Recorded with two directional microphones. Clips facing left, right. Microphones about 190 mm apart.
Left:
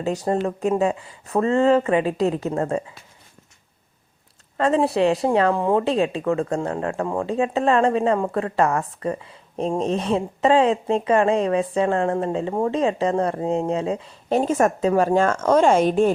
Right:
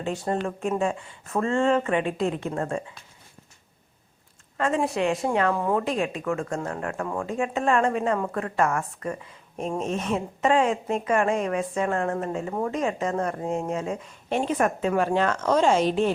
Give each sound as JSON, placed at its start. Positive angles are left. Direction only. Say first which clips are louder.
{"t": 0.0, "sound": "a woman's voice", "louder": "left 5 dB", "side_deg": 40}
{"t": 4.5, "sound": "a woman's voice", "louder": "left 5 dB", "side_deg": 30}